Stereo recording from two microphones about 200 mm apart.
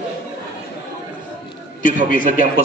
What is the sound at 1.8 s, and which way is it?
Speech, 40° left (ahead or behind).